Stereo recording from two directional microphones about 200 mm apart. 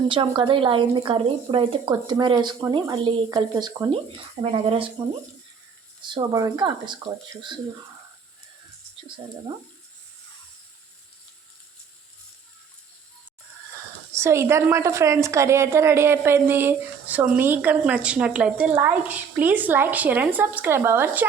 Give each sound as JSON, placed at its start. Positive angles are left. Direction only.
{"t": 0.1, "sound": "speech", "side_deg": -25}
{"t": 4.5, "sound": "speech", "side_deg": -30}
{"t": 6.0, "sound": "speech", "side_deg": -20}
{"t": 14.2, "sound": "a woman's voice", "side_deg": -15}